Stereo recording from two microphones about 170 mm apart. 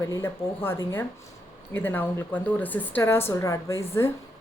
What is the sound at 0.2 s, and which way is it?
Speech, 15° left (ahead or behind).